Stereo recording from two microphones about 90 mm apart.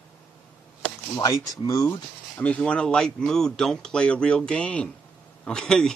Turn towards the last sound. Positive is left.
turn(degrees=10)  # may be behind; listen again after turning